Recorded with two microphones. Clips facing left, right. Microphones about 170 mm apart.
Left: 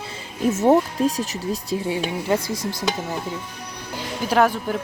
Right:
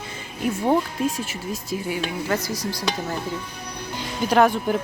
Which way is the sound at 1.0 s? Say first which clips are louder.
Left 3 dB; 35° left (ahead or behind).